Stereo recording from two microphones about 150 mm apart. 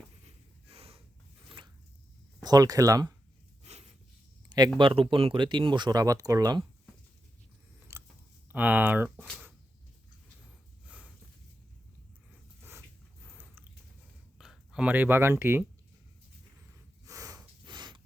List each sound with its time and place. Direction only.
0.3 s snort: 40° right (ahead or behind)
1.5 s zipper: 35° right (ahead or behind)
2.4 s speech: 25° right (ahead or behind)
3.6 s a sound: 45° right (ahead or behind)
4.4 s a sound: 25° right (ahead or behind)
4.8 s speech: 35° right (ahead or behind)
7.9 s chewing: 20° right (ahead or behind)
8.5 s speech: 10° right (ahead or behind)
10.8 s a sound: 10° right (ahead or behind)
13.2 s a sound: 10° right (ahead or behind)
14.3 s speech: 5° right (ahead or behind)
17.1 s snort: 25° right (ahead or behind)